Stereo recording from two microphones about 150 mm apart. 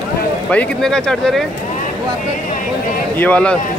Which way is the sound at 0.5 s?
5° left (ahead or behind).